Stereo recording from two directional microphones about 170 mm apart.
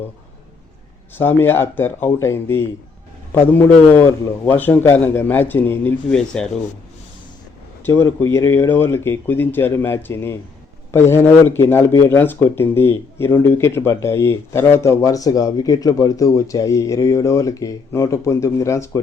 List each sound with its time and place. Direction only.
1.1 s speech: 10° left (ahead or behind)
7.9 s speech: 15° left (ahead or behind)